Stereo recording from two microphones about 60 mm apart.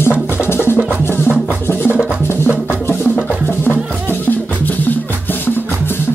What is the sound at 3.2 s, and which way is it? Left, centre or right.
Music, left.